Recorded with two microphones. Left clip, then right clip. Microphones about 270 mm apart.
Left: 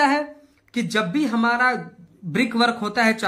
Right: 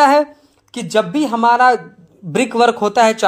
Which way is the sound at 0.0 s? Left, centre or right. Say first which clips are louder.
Right 9 dB; right.